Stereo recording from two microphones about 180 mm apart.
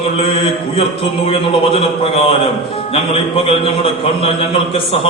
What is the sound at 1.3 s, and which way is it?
A man's voice, 30° left (ahead or behind).